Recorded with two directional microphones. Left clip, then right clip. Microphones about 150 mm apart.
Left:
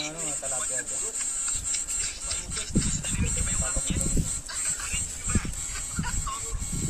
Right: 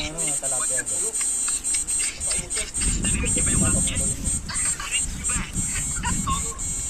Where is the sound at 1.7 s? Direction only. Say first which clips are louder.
Right 4 dB; 90° left.